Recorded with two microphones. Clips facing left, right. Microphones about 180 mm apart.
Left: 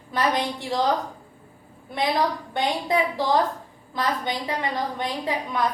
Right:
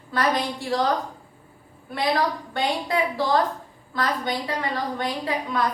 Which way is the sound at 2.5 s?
15° left (ahead or behind).